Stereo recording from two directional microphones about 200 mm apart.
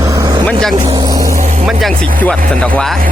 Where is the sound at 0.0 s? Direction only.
15° right (ahead or behind).